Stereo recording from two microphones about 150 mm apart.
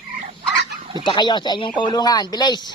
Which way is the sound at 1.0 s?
30° left (ahead or behind).